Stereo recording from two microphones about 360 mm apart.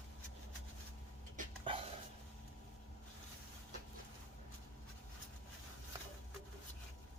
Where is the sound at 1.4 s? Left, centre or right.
Centre.